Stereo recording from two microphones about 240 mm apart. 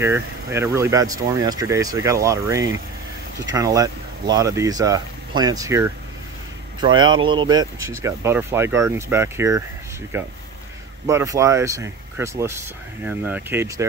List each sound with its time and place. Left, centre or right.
0.0 s speech: centre